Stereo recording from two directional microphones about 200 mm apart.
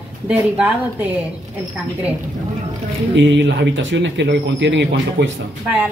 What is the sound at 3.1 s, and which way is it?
Speech, 60° right (ahead or behind).